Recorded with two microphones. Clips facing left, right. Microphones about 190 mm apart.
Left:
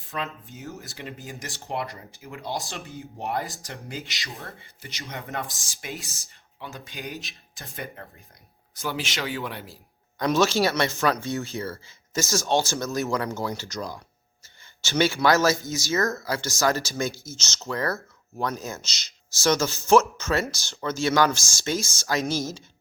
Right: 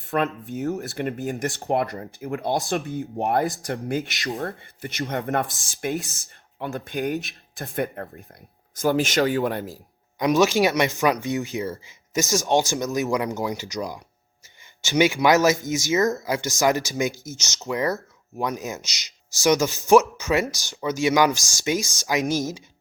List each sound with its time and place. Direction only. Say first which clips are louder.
0.1 s speech: right 9 dB; 60° right (ahead or behind)
5.9 s speech: right 7 dB; centre (ahead or behind)
6.6 s speech: right 10 dB; 55° right (ahead or behind)
10.2 s speech: right 3 dB; 15° right (ahead or behind)